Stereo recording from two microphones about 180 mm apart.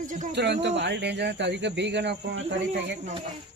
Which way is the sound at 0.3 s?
75° right (ahead or behind).